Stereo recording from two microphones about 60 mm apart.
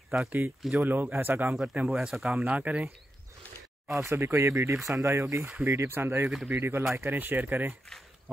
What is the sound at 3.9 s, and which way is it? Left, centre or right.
Speech, right.